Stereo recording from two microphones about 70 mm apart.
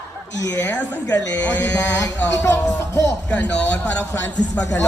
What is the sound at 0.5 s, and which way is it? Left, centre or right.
Speech, left.